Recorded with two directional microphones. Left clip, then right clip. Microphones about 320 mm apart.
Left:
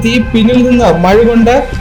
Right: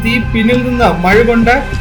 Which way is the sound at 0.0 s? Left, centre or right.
Left.